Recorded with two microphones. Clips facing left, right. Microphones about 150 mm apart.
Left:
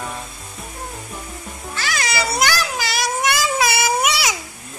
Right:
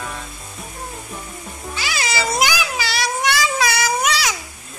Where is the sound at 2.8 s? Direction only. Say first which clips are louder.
Even; centre (ahead or behind).